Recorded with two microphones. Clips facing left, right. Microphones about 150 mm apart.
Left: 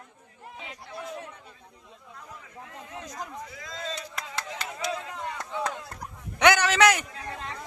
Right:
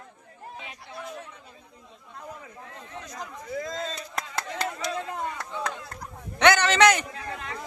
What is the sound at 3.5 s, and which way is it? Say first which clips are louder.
Chop: right 11 dB; 45° right (ahead or behind).